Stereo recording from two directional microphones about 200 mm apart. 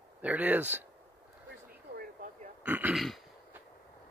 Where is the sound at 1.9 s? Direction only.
40° right (ahead or behind).